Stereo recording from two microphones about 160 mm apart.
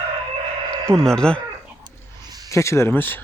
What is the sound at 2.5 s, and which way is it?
Speech, 20° left (ahead or behind).